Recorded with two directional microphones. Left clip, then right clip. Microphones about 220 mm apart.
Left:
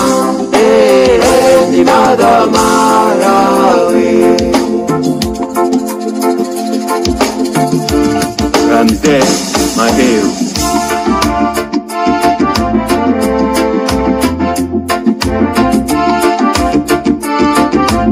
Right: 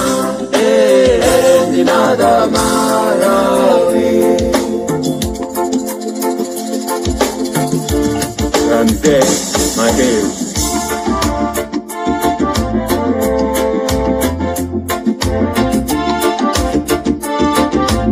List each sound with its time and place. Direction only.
0.6 s music: 30° left (ahead or behind)
8.5 s music: 25° left (ahead or behind)
12.1 s music: 25° left (ahead or behind)
15.5 s music: 25° left (ahead or behind)